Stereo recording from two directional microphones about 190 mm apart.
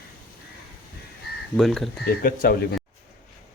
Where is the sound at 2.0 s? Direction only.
50° left (ahead or behind).